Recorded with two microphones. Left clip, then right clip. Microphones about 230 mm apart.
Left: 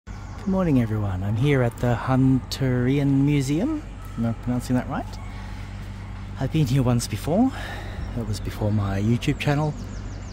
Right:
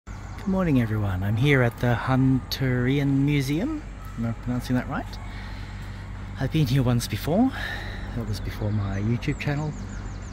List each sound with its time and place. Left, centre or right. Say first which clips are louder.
0.6 s speech: left 2 dB; centre
6.3 s speech: left 1 dB; centre